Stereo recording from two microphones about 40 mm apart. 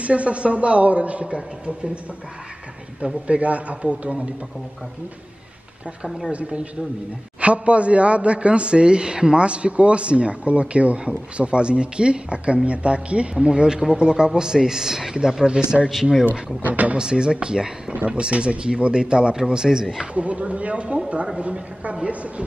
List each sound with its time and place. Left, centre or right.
0.0 s a woman's voice: right
3.3 s a woman's voice: right
6.0 s speech: centre
6.3 s a woman's voice: right; by 16.3 s centre
16.6 s a woman's voice: right
16.9 s speech: right
17.9 s a woman's voice: right; by 20.1 s centre
20.2 s a woman's voice: right